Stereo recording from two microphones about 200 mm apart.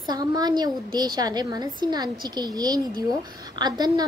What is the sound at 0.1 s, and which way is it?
A woman's voice, 20° right (ahead or behind).